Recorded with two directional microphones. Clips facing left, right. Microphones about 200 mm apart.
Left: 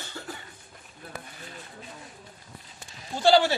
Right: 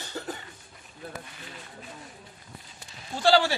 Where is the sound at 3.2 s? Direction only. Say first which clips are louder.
Left 2 dB; 20° left (ahead or behind).